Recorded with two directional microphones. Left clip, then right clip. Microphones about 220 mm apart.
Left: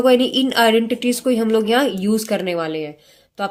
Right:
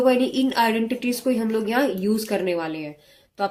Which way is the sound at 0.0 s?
35° left (ahead or behind).